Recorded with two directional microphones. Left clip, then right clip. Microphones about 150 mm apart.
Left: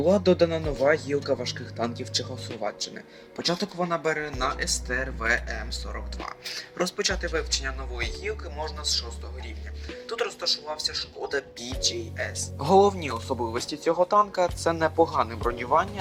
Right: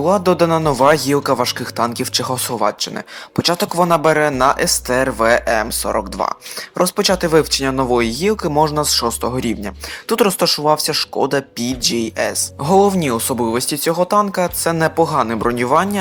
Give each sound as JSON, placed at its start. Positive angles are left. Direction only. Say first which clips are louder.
{"t": 0.0, "sound": "speech", "louder": "right 7 dB", "side_deg": -15}
{"t": 0.5, "sound": "speech", "louder": "right 11 dB", "side_deg": -40}